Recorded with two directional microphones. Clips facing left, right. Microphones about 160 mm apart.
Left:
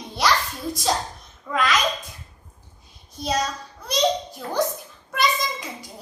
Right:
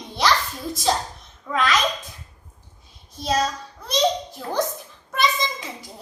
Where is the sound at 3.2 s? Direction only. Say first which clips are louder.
Right 2 dB; centre (ahead or behind).